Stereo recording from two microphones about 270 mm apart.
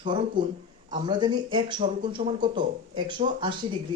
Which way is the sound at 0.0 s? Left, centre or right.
Centre.